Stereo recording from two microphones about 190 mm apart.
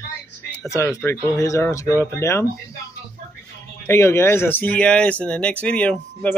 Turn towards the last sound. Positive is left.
turn(degrees=5)  # may be behind; listen again after turning